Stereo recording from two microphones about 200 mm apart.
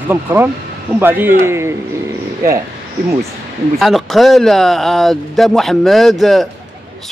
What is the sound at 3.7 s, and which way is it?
Speech, centre (ahead or behind).